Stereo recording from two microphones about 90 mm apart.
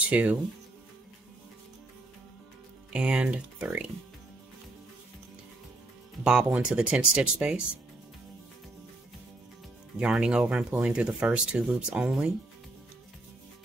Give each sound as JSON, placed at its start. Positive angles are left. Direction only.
{"t": 0.1, "sound": "speech", "side_deg": -15}
{"t": 2.9, "sound": "speech", "side_deg": -10}
{"t": 6.2, "sound": "speech", "side_deg": -10}
{"t": 9.9, "sound": "speech", "side_deg": -10}